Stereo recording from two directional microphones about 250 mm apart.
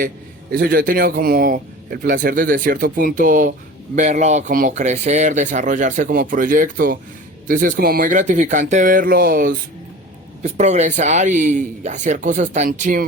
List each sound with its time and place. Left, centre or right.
0.5 s speech: right